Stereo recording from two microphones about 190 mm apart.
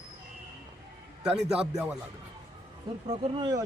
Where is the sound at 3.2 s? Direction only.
30° right (ahead or behind).